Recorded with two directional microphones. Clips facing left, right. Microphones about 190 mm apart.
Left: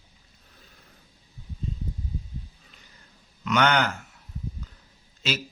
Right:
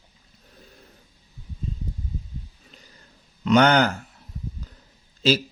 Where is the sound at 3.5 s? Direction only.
35° right (ahead or behind).